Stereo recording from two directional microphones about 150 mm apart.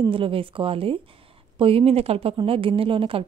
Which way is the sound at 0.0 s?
35° right (ahead or behind).